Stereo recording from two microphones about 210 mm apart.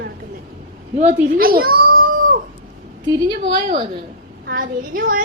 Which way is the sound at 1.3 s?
45° right (ahead or behind).